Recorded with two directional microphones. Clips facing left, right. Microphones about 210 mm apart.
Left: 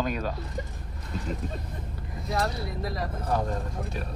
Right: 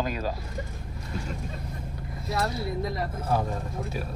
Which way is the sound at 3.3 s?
5° right (ahead or behind).